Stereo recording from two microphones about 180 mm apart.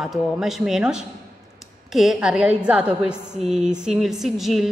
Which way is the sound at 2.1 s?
5° right (ahead or behind).